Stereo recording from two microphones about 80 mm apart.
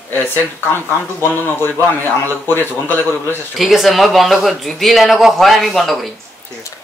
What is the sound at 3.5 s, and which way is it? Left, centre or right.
Speech, centre.